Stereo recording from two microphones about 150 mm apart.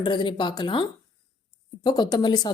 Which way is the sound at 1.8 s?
30° left (ahead or behind).